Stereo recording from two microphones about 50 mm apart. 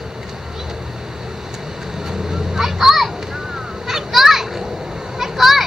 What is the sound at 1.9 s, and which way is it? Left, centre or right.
Vehicle, centre.